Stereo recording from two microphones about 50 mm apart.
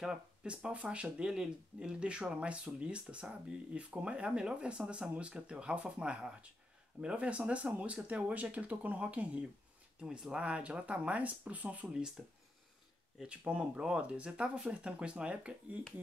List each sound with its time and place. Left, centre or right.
0.0 s speech: centre
9.9 s speech: centre; by 11.9 s right
12.2 s speech: centre
13.4 s speech: right